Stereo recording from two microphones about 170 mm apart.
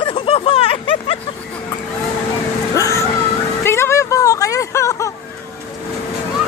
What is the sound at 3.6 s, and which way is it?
Music, 15° left (ahead or behind).